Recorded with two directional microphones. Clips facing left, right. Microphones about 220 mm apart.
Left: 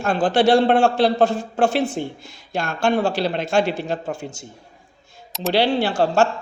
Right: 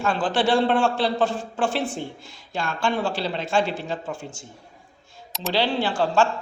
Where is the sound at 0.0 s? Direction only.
45° left (ahead or behind).